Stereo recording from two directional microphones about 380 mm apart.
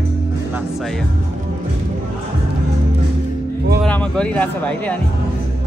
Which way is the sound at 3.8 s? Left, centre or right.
Centre.